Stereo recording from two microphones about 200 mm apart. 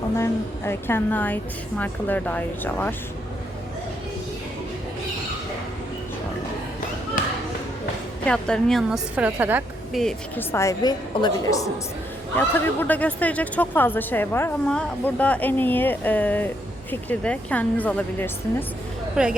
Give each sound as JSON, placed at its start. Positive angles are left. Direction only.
{"t": 0.2, "sound": "speech", "side_deg": 10}
{"t": 7.2, "sound": "a sound", "side_deg": 45}
{"t": 8.3, "sound": "a woman's voice", "side_deg": 5}
{"t": 10.0, "sound": "a woman's voice", "side_deg": 0}
{"t": 10.5, "sound": "speech", "side_deg": 15}
{"t": 19.2, "sound": "a woman's voice", "side_deg": -5}